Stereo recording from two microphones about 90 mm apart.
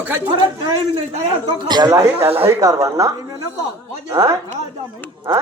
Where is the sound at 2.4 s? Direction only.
35° right (ahead or behind).